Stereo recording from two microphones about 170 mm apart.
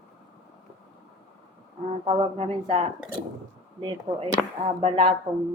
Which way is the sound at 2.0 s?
35° right (ahead or behind).